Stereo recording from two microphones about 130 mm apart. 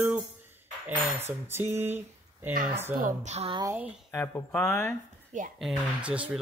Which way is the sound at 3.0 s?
75° right (ahead or behind).